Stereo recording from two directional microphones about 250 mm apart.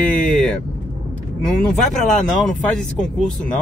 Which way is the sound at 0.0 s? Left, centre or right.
Centre.